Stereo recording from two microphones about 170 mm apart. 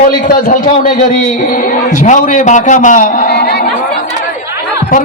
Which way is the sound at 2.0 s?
45° left (ahead or behind).